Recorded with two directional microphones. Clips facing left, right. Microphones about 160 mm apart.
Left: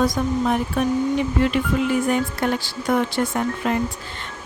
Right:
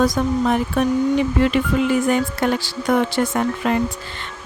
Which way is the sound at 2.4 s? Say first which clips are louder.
Right 3 dB; 90° right.